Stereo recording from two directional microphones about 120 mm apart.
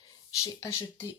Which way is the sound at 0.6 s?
25° left (ahead or behind).